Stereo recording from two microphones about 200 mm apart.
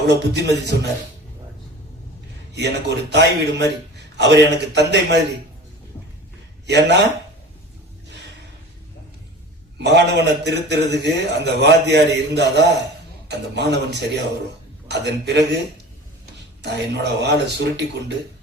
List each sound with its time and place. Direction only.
0.1 s a man's voice: 60° right (ahead or behind)
2.5 s a man's voice: 60° right (ahead or behind)
6.7 s a man's voice: 60° right (ahead or behind)
9.8 s a man's voice: 60° right (ahead or behind)
16.6 s a man's voice: 60° right (ahead or behind)